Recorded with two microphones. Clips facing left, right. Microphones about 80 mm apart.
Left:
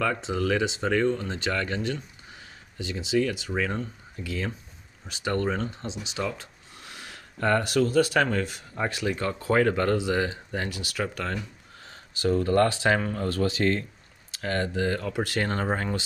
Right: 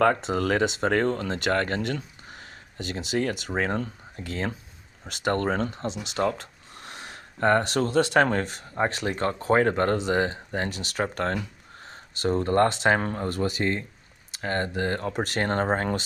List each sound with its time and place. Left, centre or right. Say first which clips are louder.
0.0 s speech: right 5 dB; right
4.2 s speech: right 1 dB; right
9.4 s speech: right 1 dB; right
11.9 s speech: left 1 dB; right
14.4 s speech: even; right
15.5 s speech: right 3 dB; right